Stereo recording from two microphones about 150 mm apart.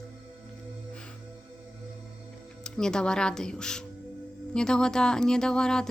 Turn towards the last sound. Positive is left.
turn(degrees=5)  # may be behind; listen again after turning